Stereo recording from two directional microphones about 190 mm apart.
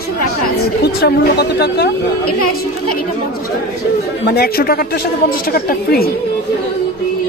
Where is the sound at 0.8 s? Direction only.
60° left (ahead or behind).